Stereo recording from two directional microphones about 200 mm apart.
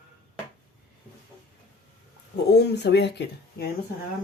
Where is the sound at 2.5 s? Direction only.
55° left (ahead or behind).